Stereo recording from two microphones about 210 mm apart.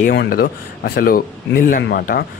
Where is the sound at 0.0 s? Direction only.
50° left (ahead or behind).